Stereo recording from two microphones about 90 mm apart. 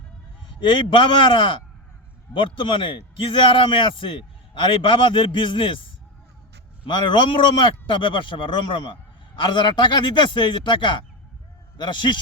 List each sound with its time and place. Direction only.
0.7 s a man's voice: 70° left (ahead or behind)
6.8 s speech: 60° left (ahead or behind)